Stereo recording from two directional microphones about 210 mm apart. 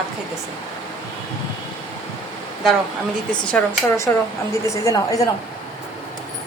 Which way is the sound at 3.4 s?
10° left (ahead or behind).